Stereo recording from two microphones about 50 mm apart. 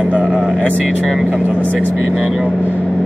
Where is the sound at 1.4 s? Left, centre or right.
Right.